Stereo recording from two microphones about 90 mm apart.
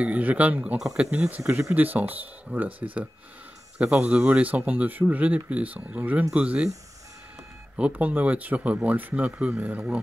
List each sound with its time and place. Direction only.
0.0 s speech: 15° right (ahead or behind)
0.7 s speech: 5° right (ahead or behind)
1.1 s speech: 15° right (ahead or behind)
7.7 s speech: 15° right (ahead or behind)